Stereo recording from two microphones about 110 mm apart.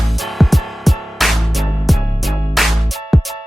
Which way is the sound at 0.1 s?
Centre (ahead or behind).